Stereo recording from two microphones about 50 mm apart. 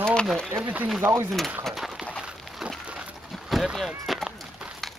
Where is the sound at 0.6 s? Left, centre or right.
Right.